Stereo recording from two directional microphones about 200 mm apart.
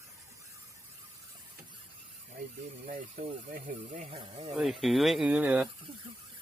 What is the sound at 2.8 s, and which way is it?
Speech, 45° right (ahead or behind).